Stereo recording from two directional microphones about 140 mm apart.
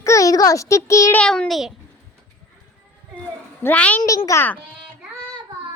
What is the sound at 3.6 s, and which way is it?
Child singing, 10° left (ahead or behind).